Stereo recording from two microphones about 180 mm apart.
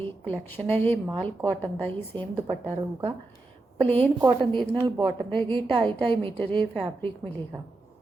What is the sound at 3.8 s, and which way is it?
Speech, 10° left (ahead or behind).